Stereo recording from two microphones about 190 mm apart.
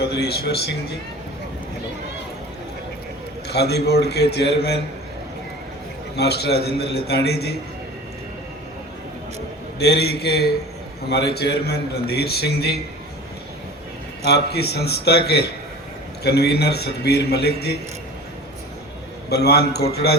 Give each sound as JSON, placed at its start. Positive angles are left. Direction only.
{"t": 0.0, "sound": "a man's voice", "side_deg": 60}
{"t": 3.5, "sound": "a man's voice", "side_deg": 60}
{"t": 6.1, "sound": "a man's voice", "side_deg": 60}
{"t": 9.7, "sound": "a man's voice", "side_deg": 60}
{"t": 14.3, "sound": "a man's voice", "side_deg": 60}
{"t": 19.3, "sound": "a man's voice", "side_deg": 60}